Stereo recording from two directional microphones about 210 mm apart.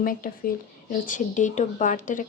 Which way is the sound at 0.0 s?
40° left (ahead or behind).